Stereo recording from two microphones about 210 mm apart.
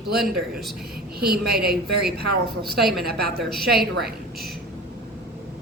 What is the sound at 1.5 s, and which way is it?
A woman's voice, 50° right (ahead or behind).